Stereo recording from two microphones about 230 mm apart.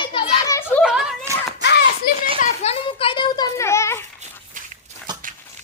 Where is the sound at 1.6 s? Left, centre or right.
Left.